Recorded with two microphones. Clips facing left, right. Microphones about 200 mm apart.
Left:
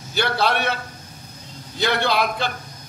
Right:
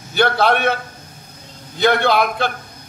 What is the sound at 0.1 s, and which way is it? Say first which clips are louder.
Speech: right 5 dB; 55° right (ahead or behind).